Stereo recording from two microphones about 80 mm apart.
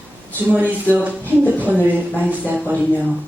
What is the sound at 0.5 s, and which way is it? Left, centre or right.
Speech, centre.